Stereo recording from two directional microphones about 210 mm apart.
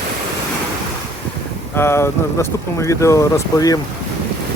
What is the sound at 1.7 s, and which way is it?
Speech, 10° left (ahead or behind).